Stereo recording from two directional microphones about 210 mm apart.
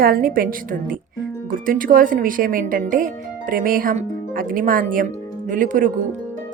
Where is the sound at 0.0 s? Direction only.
45° right (ahead or behind).